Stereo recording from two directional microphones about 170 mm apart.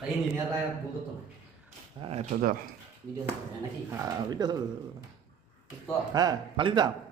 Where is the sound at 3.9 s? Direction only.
15° right (ahead or behind).